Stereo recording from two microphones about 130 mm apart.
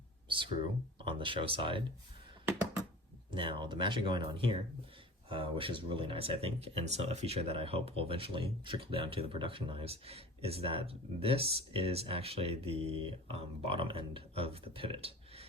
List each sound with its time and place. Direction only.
0.3 s a sound: 40° right (ahead or behind)
0.9 s speech: 40° right (ahead or behind)
3.3 s speech: 40° right (ahead or behind)